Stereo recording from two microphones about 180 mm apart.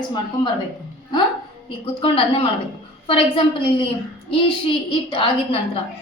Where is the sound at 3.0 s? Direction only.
30° left (ahead or behind).